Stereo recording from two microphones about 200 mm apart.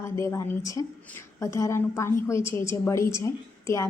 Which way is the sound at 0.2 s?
15° left (ahead or behind).